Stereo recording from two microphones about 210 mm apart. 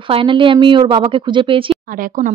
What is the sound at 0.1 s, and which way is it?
Speech, 25° right (ahead or behind).